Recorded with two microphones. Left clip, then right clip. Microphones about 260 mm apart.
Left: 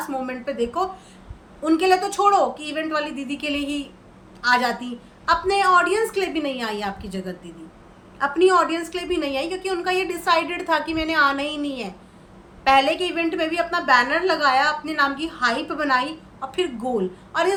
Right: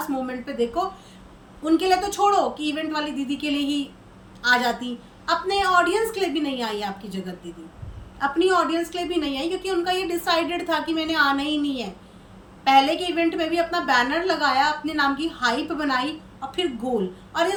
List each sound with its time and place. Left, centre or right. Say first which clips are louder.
0.3 s a woman's voice: left 1 dB; centre
16.9 s a woman's voice: even; left
17.3 s a woman's voice: left 1 dB; centre